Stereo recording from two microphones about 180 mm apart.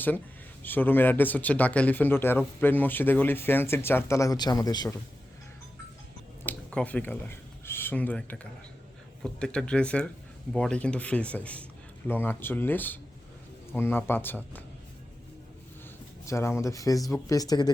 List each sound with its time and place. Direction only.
0.6 s speech: 10° left (ahead or behind)
6.4 s a sound: 10° left (ahead or behind)
9.2 s speech: 5° left (ahead or behind)
16.2 s speech: 15° left (ahead or behind)